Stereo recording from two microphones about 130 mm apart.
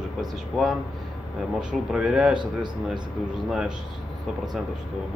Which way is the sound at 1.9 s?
5° right (ahead or behind).